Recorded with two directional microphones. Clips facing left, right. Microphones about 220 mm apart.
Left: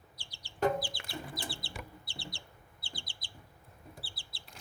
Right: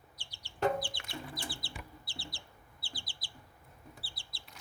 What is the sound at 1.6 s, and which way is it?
Chicken, centre (ahead or behind).